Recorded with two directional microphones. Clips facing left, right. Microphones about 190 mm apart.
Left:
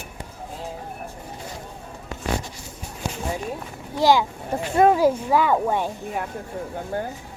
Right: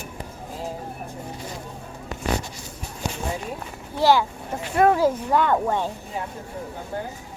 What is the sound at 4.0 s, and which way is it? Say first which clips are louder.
Speech: left 1 dB; 15° left (ahead or behind).